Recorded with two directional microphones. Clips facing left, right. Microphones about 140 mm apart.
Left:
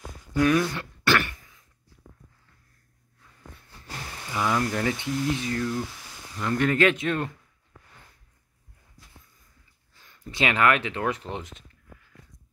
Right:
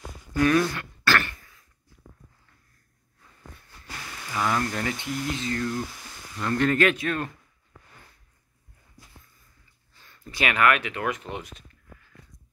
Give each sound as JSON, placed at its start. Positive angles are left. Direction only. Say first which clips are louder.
{"t": 0.4, "sound": "speech", "louder": "even", "side_deg": 5}
{"t": 0.7, "sound": "throat clearing", "louder": "left 1 dB", "side_deg": 15}
{"t": 3.8, "sound": "a sound", "louder": "left 1 dB", "side_deg": 30}
{"t": 4.3, "sound": "speech", "louder": "left 1 dB", "side_deg": 15}
{"t": 10.0, "sound": "speech", "louder": "left 2 dB", "side_deg": 20}